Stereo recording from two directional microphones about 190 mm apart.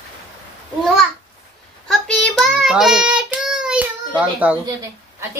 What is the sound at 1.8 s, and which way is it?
Child singing, centre (ahead or behind).